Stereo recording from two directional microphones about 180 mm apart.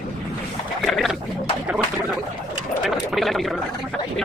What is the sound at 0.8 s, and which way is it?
Boat, centre (ahead or behind).